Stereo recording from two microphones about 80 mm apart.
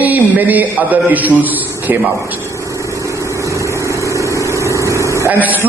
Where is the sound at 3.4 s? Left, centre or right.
Right.